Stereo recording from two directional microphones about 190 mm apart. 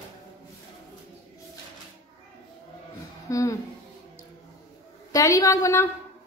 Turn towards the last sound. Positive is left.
turn(degrees=15)  # may be behind; listen again after turning